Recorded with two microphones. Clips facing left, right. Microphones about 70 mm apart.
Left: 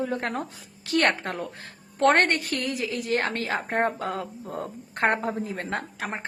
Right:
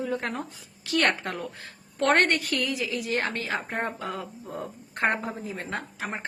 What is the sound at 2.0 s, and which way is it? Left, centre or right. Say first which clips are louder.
Speech: left 2 dB; centre.